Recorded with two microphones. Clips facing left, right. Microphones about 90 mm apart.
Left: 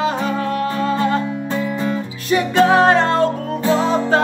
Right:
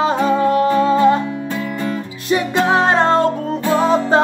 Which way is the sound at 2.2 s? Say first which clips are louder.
Left 2 dB; 20° right (ahead or behind).